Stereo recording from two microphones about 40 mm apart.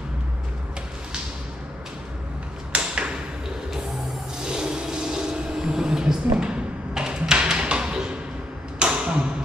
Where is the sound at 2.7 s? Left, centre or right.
Right.